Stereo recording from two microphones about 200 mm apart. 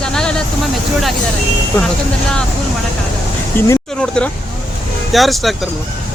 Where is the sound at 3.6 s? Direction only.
10° left (ahead or behind).